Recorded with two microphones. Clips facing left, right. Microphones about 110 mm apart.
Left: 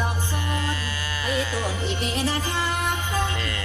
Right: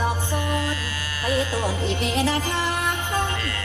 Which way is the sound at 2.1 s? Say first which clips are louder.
Right 3 dB; 90° right.